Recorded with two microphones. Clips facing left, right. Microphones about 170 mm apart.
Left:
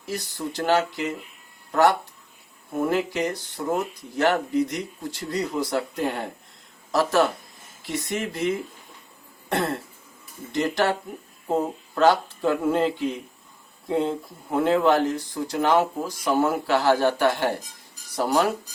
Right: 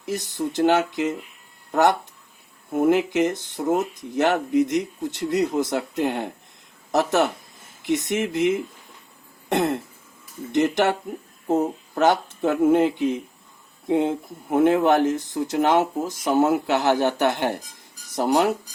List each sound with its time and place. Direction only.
0.0 s speech: 20° right (ahead or behind)